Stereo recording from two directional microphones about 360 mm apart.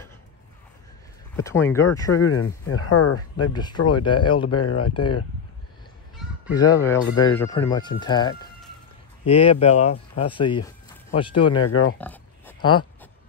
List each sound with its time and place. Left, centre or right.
1.4 s speech: centre
2.1 s speech: left
4.0 s speech: centre
4.5 s speech: left
6.5 s speech: centre
11.6 s speech: left
12.0 s oink: centre